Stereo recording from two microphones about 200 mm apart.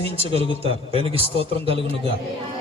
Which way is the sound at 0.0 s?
30° right (ahead or behind).